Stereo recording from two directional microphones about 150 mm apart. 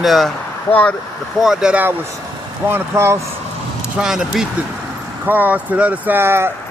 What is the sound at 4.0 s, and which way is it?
Speech, 5° right (ahead or behind).